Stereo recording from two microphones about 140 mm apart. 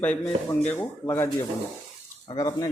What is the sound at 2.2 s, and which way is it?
Speech, 25° left (ahead or behind).